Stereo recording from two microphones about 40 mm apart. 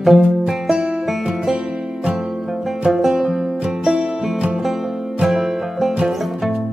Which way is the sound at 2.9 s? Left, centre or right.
Centre.